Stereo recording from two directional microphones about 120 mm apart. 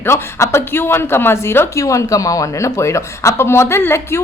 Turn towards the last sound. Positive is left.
turn(degrees=20)  # may be behind; listen again after turning